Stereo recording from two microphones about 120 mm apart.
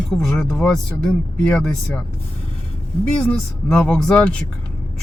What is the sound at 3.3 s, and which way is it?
Speech, 10° left (ahead or behind).